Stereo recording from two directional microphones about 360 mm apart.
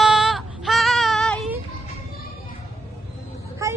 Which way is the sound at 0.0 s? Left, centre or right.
Centre.